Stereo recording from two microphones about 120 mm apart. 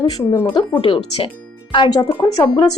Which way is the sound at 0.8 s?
50° left (ahead or behind).